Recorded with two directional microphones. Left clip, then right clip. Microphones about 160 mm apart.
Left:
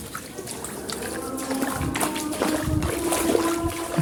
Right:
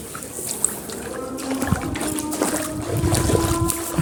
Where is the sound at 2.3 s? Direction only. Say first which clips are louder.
Right 1 dB; 40° right (ahead or behind).